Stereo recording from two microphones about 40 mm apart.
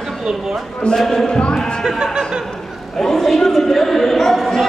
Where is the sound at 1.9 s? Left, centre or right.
Centre.